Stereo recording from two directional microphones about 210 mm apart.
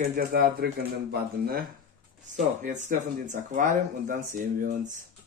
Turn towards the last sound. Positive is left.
turn(degrees=-40)  # may be behind; listen again after turning